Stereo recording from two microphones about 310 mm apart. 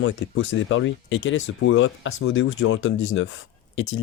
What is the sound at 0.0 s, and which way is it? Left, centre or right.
Speech, left.